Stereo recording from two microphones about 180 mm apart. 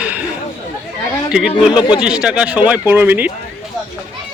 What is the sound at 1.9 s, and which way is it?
Speech, 5° right (ahead or behind).